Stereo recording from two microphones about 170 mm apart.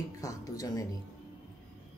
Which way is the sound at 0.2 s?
20° left (ahead or behind).